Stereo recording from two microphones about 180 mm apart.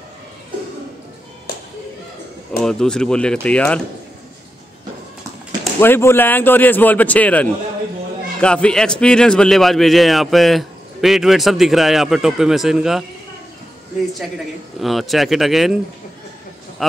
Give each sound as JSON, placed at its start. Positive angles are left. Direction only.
{"t": 2.6, "sound": "a man's voice", "side_deg": 5}
{"t": 5.8, "sound": "a man's voice", "side_deg": 15}
{"t": 14.8, "sound": "a man's voice", "side_deg": 0}